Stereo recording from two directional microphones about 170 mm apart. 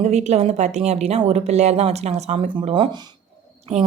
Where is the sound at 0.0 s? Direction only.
40° right (ahead or behind).